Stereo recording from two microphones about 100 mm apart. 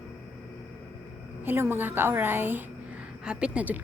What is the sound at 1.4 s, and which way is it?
A woman's voice, 20° right (ahead or behind).